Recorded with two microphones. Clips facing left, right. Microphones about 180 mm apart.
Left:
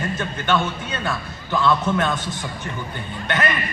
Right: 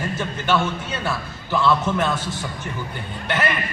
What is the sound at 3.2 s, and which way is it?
Speech, 10° right (ahead or behind).